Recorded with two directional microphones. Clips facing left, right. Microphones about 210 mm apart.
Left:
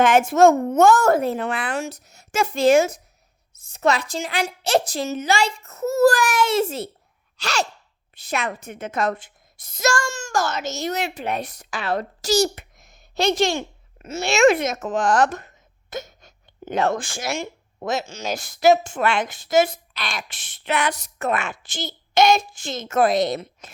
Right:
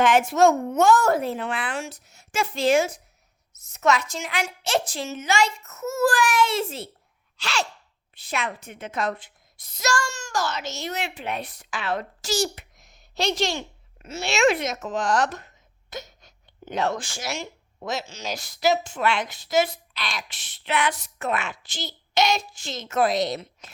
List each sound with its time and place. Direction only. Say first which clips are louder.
0.0 s a child's voice: left 3 dB; 45° left (ahead or behind)
3.5 s a woman's voice: left 1 dB; 30° left (ahead or behind); by 23.7 s 50° left (ahead or behind)